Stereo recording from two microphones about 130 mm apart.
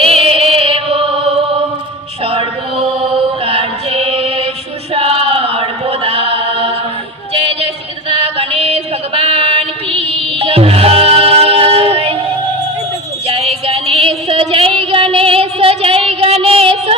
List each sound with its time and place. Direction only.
0.0 s music: 45° right (ahead or behind)
2.2 s chant: 45° right (ahead or behind)
7.3 s a sound: 50° right (ahead or behind)
13.2 s music: 50° right (ahead or behind)